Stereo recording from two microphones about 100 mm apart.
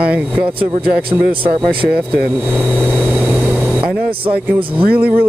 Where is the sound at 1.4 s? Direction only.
60° right (ahead or behind).